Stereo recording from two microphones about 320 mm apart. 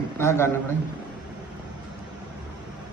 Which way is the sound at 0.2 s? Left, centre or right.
Centre.